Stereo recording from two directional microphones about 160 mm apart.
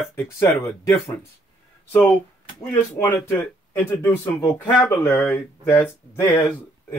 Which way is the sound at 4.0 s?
10° left (ahead or behind).